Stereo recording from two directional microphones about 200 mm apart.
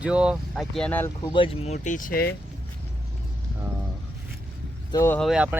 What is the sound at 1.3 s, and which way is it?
Speech, 25° left (ahead or behind).